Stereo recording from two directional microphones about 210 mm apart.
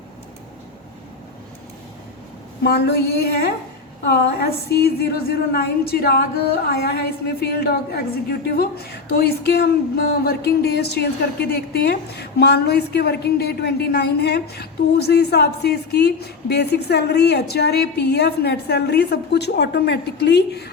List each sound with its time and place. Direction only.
2.6 s speech: 50° left (ahead or behind)